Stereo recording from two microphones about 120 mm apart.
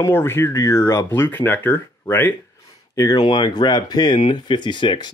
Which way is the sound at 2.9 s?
30° left (ahead or behind).